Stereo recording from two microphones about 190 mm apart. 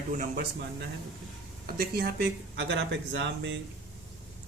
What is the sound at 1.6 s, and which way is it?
Speech, 50° right (ahead or behind).